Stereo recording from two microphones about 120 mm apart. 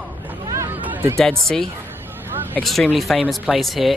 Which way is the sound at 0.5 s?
20° right (ahead or behind).